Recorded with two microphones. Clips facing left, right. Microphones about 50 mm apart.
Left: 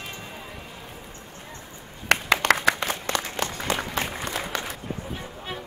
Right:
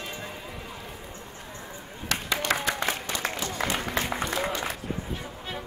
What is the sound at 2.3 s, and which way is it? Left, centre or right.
Applause, left.